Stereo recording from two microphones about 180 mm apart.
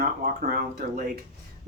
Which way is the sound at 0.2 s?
55° right (ahead or behind).